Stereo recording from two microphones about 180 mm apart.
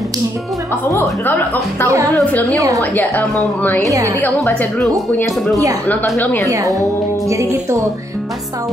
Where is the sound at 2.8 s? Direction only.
10° left (ahead or behind).